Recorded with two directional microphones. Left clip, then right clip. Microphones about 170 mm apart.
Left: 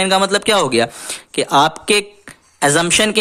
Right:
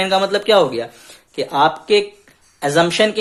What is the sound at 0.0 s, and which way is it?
Speech, 40° left (ahead or behind).